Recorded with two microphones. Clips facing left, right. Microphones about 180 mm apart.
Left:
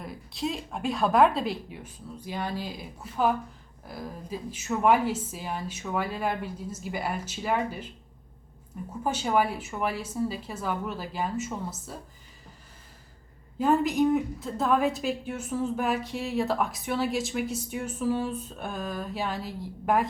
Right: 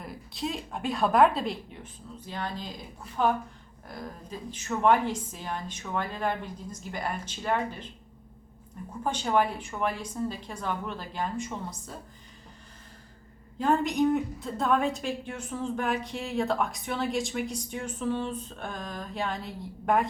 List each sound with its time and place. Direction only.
0.0 s a woman's voice: centre (ahead or behind)
8.9 s speech: 5° left (ahead or behind)
13.6 s a woman's voice: 5° left (ahead or behind)